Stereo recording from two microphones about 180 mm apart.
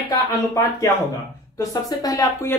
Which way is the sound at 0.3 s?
20° left (ahead or behind).